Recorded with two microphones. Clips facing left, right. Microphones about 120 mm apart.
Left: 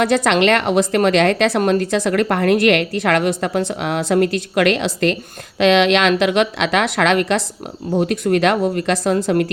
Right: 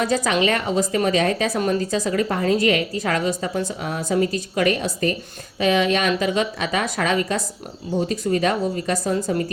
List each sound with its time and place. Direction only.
0.0 s a woman's voice: 70° left (ahead or behind)